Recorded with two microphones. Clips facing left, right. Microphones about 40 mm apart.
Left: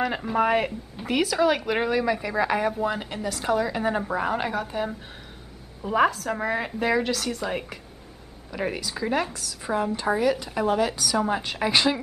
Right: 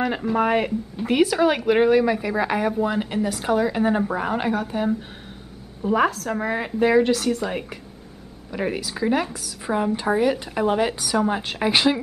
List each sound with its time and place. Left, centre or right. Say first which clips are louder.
0.0 s a woman's voice: right 2 dB; centre
11.1 s a woman's voice: right 3 dB; centre